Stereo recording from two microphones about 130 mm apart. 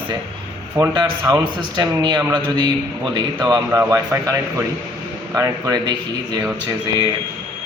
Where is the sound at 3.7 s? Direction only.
20° right (ahead or behind).